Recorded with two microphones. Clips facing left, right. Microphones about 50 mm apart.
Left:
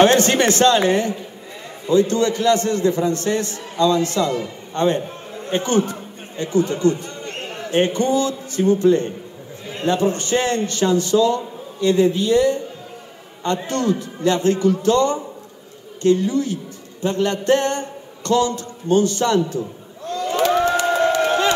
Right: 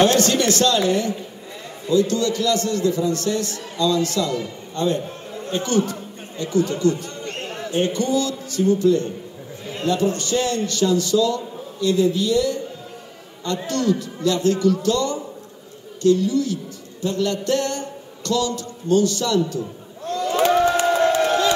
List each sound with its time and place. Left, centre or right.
0.0 s a man's voice: left
5.0 s chatter: centre
5.5 s chatter: left
7.7 s a man's voice: left
13.7 s a man's voice: left
20.1 s a sound: left